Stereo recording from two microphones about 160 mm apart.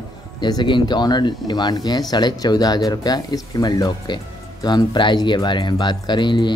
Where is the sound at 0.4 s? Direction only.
25° left (ahead or behind).